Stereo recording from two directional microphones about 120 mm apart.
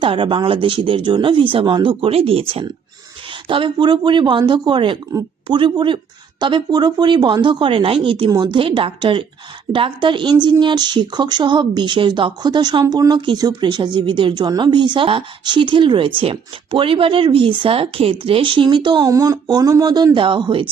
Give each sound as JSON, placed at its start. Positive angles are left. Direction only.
{"t": 0.0, "sound": "a woman's voice", "side_deg": -45}
{"t": 19.1, "sound": "a woman's voice", "side_deg": -30}